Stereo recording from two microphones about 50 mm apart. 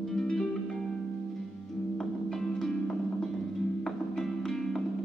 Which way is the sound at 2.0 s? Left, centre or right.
Centre.